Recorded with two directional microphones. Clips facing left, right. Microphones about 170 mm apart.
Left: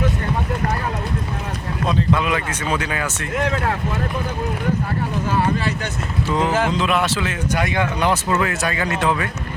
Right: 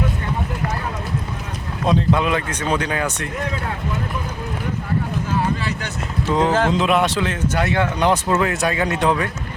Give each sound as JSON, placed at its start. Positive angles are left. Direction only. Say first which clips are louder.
{"t": 1.9, "sound": "speech", "louder": "right 2 dB", "side_deg": 0}
{"t": 3.3, "sound": "speech", "louder": "left 5 dB", "side_deg": 75}
{"t": 5.3, "sound": "vehicle", "louder": "left 2 dB", "side_deg": 60}
{"t": 6.3, "sound": "speech", "louder": "right 2 dB", "side_deg": 5}
{"t": 7.4, "sound": "speech", "louder": "right 1 dB", "side_deg": 15}